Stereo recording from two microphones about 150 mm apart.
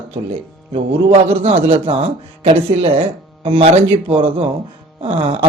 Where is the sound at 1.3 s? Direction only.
40° right (ahead or behind).